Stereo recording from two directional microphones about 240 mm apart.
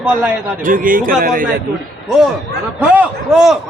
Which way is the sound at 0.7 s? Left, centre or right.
Right.